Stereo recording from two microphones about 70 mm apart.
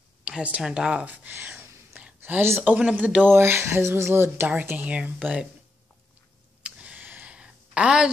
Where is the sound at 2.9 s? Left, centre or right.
Right.